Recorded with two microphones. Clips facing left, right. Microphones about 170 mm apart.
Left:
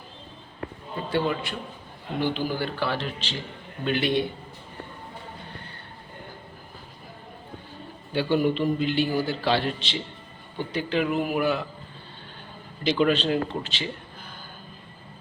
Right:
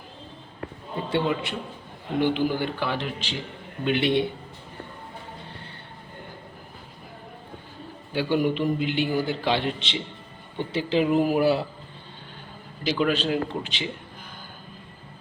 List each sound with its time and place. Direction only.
1.1 s a man's voice: 20° right (ahead or behind)
8.1 s a man's voice: 10° right (ahead or behind); by 11.6 s 35° right (ahead or behind)
12.8 s a man's voice: 5° right (ahead or behind)